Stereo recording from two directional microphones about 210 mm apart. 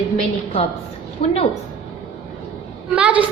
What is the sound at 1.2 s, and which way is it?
Speech, 25° left (ahead or behind).